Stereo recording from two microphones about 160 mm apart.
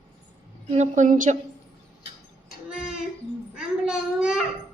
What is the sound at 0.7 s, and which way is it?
Speech, 50° right (ahead or behind).